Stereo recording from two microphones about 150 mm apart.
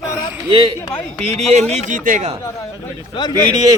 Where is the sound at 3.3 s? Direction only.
25° right (ahead or behind).